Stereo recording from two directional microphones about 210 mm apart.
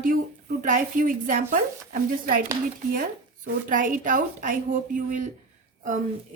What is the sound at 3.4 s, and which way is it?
A woman's voice, 40° right (ahead or behind).